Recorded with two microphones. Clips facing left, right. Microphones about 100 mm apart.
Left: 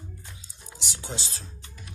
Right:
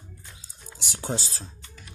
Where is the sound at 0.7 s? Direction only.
45° right (ahead or behind).